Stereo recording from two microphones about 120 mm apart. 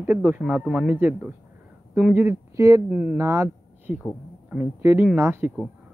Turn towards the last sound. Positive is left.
turn(degrees=-20)  # may be behind; listen again after turning